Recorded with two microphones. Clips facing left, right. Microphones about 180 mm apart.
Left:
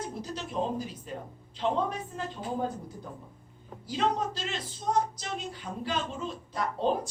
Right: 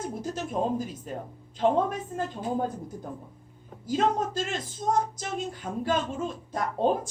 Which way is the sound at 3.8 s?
50° right (ahead or behind).